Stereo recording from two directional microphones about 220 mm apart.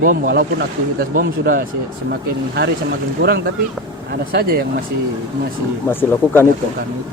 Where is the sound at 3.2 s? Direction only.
45° right (ahead or behind).